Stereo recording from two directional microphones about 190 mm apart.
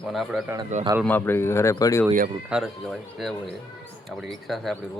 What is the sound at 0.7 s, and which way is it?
Speech, 40° right (ahead or behind).